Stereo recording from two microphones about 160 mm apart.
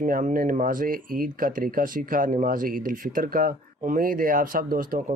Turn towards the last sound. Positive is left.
turn(degrees=-60)  # may be behind; listen again after turning